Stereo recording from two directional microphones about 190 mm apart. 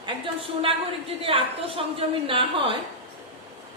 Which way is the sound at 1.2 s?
30° right (ahead or behind).